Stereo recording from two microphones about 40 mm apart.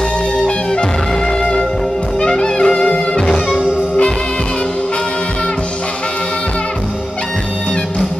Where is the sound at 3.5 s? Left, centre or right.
Right.